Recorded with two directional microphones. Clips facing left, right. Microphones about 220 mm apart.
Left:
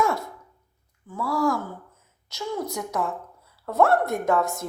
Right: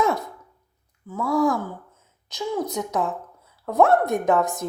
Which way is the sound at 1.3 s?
20° right (ahead or behind).